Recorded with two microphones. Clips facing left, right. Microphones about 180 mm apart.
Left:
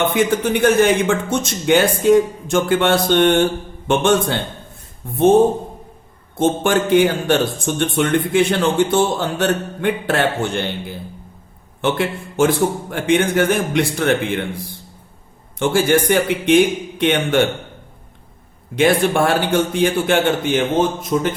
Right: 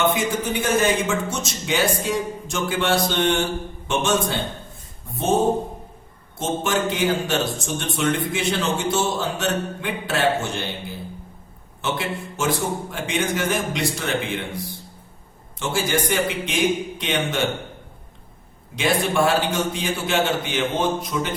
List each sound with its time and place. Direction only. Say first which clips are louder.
0.0 s a man's voice: left 5 dB; 60° left (ahead or behind)
6.3 s a man's voice: left 7 dB; 55° left (ahead or behind)
11.8 s a man's voice: left 7 dB; 55° left (ahead or behind)
15.5 s a man's voice: left 8 dB; 55° left (ahead or behind)
18.8 s a man's voice: left 5 dB; 55° left (ahead or behind)
21.1 s music: left 7 dB; 45° left (ahead or behind)